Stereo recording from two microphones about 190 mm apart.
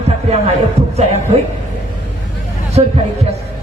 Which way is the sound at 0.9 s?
35° right (ahead or behind).